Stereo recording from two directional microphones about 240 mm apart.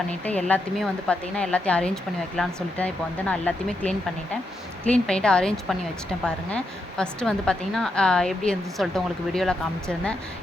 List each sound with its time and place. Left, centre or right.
0.1 s a woman's voice: centre